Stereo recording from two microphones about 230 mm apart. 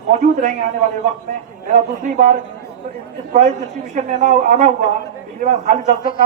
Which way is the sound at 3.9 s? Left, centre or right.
Right.